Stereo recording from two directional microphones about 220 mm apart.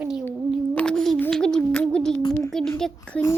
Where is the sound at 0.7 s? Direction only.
5° left (ahead or behind).